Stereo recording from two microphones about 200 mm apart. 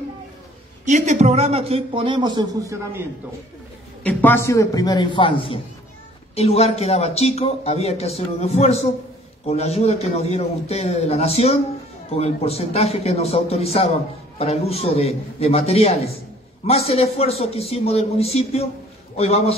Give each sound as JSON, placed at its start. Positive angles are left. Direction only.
{"t": 0.8, "sound": "a man's voice", "side_deg": -40}
{"t": 4.0, "sound": "a man's voice", "side_deg": 10}